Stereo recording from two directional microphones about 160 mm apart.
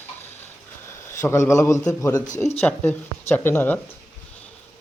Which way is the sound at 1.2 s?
15° left (ahead or behind).